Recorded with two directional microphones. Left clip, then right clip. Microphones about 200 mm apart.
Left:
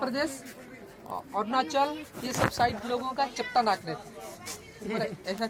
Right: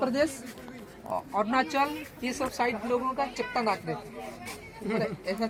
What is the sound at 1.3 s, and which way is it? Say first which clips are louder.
Speech: even; 20° right (ahead or behind).